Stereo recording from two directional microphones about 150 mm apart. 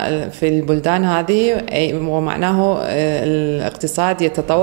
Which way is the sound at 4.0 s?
20° right (ahead or behind).